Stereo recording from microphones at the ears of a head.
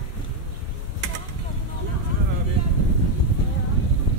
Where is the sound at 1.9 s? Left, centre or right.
Right.